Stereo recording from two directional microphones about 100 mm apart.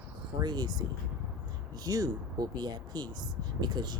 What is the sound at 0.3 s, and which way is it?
Speech, 40° right (ahead or behind).